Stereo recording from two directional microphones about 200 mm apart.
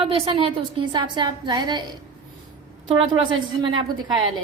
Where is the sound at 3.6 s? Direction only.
20° right (ahead or behind).